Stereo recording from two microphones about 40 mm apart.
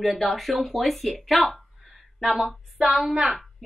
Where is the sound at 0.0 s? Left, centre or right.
Centre.